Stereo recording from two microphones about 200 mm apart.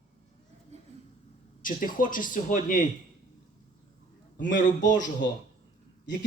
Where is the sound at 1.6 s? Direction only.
40° left (ahead or behind).